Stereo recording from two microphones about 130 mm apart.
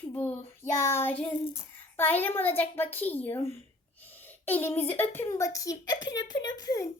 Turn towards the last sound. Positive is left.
turn(degrees=30)  # may be behind; listen again after turning